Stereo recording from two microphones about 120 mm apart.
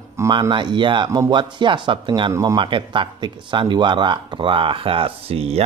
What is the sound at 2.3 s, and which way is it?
Speech, 30° right (ahead or behind).